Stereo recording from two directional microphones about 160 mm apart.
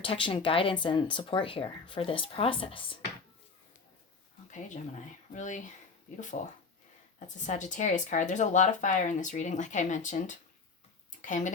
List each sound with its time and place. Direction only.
0.0 s speech: 35° left (ahead or behind)
4.5 s speech: 50° left (ahead or behind)